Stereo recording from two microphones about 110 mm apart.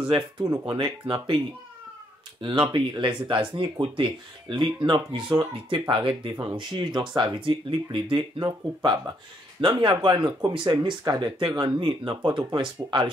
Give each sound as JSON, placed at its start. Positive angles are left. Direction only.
{"t": 0.1, "sound": "speech", "side_deg": -60}
{"t": 0.7, "sound": "speech", "side_deg": -50}
{"t": 2.4, "sound": "speech", "side_deg": -45}
{"t": 8.5, "sound": "speech", "side_deg": -35}
{"t": 9.6, "sound": "speech", "side_deg": -50}